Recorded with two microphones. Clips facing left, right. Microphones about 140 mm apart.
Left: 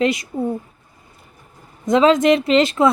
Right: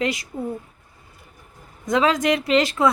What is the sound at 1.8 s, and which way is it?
A woman's voice, 25° left (ahead or behind).